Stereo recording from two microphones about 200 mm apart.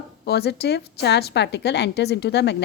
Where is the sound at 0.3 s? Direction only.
55° left (ahead or behind).